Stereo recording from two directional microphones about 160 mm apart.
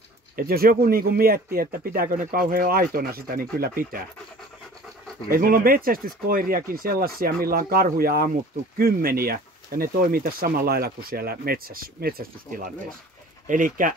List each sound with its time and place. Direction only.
0.4 s speech: 65° right (ahead or behind)
5.3 s speech: 65° right (ahead or behind)